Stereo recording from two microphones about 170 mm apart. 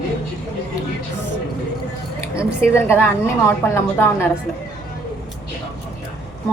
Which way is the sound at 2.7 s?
15° left (ahead or behind).